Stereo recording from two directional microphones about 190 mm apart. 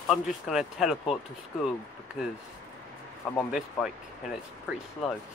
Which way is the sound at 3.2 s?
Centre (ahead or behind).